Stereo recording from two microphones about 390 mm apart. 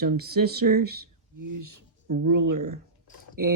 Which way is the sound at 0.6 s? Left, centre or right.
Right.